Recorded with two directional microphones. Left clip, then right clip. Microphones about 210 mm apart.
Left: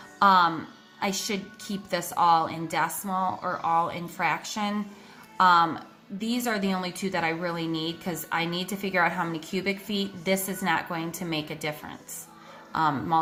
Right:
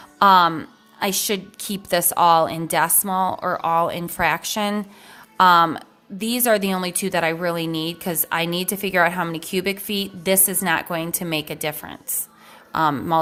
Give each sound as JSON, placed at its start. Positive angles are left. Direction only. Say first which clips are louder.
{"t": 0.2, "sound": "speech", "louder": "right 6 dB", "side_deg": -50}